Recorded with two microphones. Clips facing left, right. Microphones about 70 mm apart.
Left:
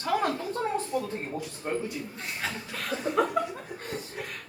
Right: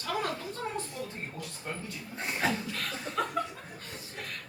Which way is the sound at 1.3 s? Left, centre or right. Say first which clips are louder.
Left 8 dB; left.